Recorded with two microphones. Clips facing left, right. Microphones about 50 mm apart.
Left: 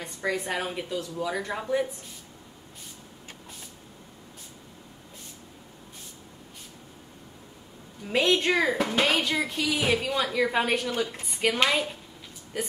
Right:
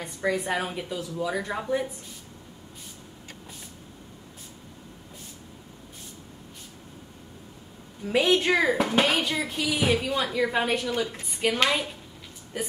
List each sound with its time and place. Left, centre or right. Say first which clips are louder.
0.0 s a woman's voice: right 2 dB; centre
8.1 s a woman's voice: right 1 dB; centre